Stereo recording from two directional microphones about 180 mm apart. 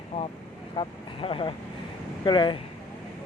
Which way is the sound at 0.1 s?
30° left (ahead or behind).